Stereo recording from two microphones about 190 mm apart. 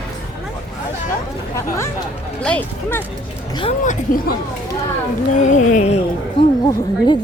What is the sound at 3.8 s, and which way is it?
Speech, 45° left (ahead or behind).